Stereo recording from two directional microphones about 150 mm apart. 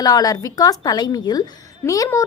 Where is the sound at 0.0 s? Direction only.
25° left (ahead or behind).